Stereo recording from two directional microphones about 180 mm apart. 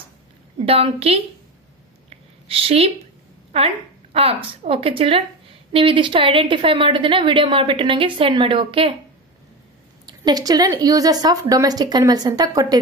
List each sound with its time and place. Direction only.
0.7 s a woman's voice: 35° right (ahead or behind)
2.0 s a sound: 30° right (ahead or behind)
3.5 s a woman's voice: 35° right (ahead or behind)
10.0 s a woman's voice: 20° right (ahead or behind)